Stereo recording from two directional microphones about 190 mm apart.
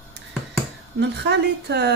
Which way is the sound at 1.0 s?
65° right (ahead or behind).